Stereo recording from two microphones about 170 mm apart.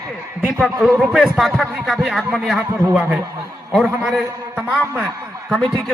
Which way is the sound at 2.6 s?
15° right (ahead or behind).